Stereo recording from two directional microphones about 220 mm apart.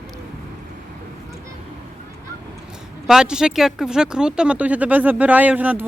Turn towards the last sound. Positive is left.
turn(degrees=-5)  # may be behind; listen again after turning